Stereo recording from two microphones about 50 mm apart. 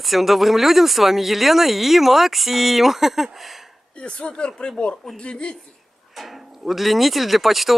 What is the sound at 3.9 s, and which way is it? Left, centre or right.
Speech, left.